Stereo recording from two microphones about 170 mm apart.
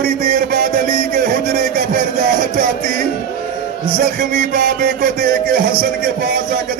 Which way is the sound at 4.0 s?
50° right (ahead or behind).